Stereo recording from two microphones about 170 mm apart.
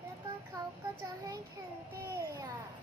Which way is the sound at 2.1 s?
20° right (ahead or behind).